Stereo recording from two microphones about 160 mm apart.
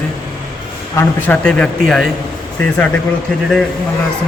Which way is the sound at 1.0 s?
10° left (ahead or behind).